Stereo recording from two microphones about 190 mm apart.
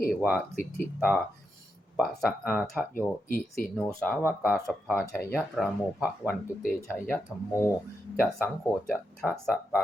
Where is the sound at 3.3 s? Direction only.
45° left (ahead or behind).